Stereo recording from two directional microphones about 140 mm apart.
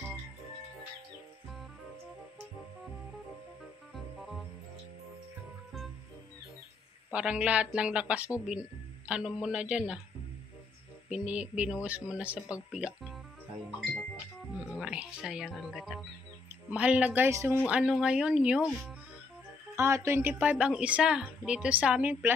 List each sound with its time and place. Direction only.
3.9 s music: centre (ahead or behind)
7.1 s a woman's voice: 10° right (ahead or behind)
11.1 s a woman's voice: 5° right (ahead or behind)
14.8 s a woman's voice: 10° right (ahead or behind)
17.6 s a woman's voice: 5° right (ahead or behind)
19.7 s a woman's voice: 20° right (ahead or behind)